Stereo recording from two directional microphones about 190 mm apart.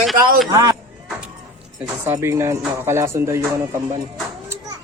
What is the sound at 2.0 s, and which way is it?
Speech, 10° right (ahead or behind).